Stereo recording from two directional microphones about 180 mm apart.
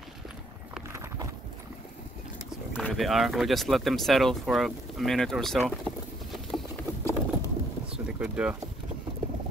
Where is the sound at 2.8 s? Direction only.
Centre (ahead or behind).